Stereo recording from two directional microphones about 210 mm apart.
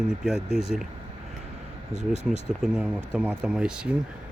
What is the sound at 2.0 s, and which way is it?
Speech, 30° left (ahead or behind).